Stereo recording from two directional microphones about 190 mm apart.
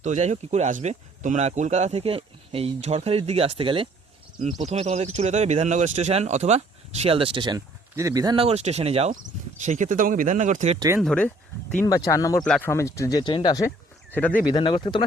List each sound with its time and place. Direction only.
0.0 s speech: 40° right (ahead or behind)
10.8 s speech: 15° right (ahead or behind)
11.0 s speech: 5° left (ahead or behind)
12.5 s speech: 5° left (ahead or behind)
12.7 s speech: 15° left (ahead or behind)
14.1 s speech: 10° left (ahead or behind)
14.4 s speech: 25° left (ahead or behind)